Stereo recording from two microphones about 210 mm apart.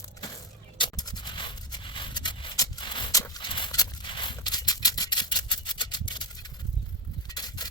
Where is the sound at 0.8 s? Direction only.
20° left (ahead or behind).